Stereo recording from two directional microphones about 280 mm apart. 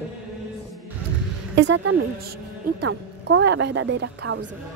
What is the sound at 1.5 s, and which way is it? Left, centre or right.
A woman's voice, right.